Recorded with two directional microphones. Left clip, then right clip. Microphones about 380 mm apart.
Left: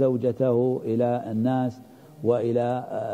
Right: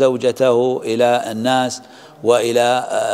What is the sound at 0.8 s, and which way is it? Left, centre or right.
Speech, centre.